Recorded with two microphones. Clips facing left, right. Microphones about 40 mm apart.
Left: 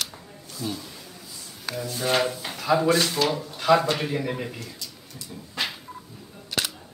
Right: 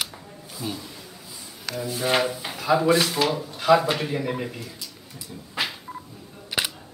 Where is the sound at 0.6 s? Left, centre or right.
Centre.